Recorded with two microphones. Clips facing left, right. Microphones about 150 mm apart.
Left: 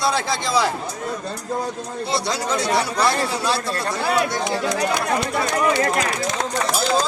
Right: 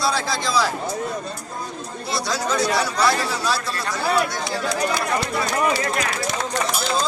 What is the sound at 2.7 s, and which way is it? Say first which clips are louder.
Speech: left 1 dB; 55° left (ahead or behind).